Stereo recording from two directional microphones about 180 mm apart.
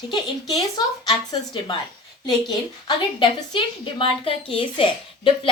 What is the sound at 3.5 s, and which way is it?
A woman's voice, 30° left (ahead or behind).